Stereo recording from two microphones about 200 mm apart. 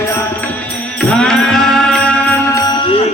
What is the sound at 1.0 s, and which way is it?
Music, 5° left (ahead or behind).